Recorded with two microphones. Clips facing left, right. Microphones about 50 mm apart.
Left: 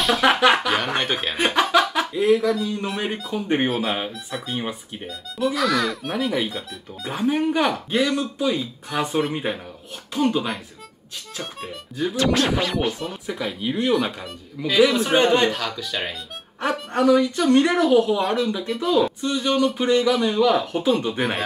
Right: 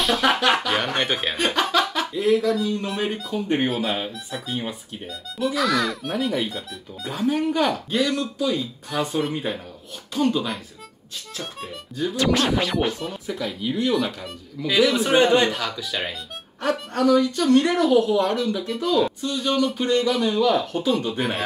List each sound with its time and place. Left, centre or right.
0.0 s speech: centre
1.5 s a sound: centre
2.2 s a woman's voice: centre
7.1 s a woman's voice: left
12.0 s a woman's voice: centre
12.6 s speech: centre
13.1 s a woman's voice: centre
14.2 s speech: centre
16.9 s a woman's voice: centre
19.3 s speech: left
19.6 s a woman's voice: centre